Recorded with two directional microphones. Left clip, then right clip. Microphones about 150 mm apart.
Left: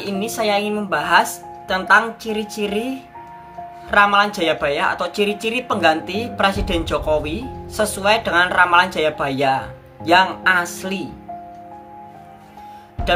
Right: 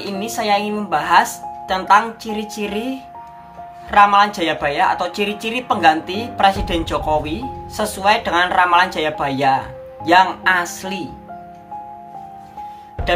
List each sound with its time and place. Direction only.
0.0 s speech: 5° left (ahead or behind)